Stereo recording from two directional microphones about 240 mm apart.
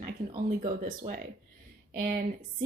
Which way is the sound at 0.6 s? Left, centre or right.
Centre.